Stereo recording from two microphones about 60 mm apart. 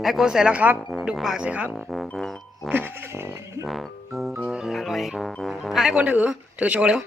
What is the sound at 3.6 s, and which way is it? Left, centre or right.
Music, centre.